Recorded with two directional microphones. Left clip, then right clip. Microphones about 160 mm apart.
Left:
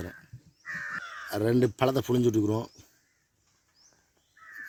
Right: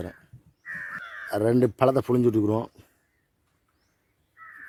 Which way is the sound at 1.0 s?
40° right (ahead or behind).